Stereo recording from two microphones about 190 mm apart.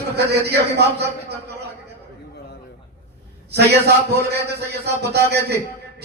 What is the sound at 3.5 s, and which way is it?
Speech, 60° right (ahead or behind).